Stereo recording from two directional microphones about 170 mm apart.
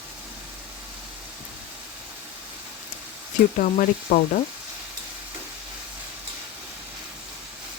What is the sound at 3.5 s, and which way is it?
Frying, 50° left (ahead or behind).